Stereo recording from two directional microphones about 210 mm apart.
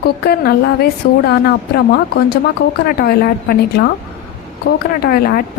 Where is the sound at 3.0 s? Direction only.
45° left (ahead or behind).